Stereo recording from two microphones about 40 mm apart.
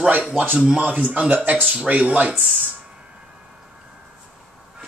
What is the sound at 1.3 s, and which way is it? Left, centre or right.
Speech, right.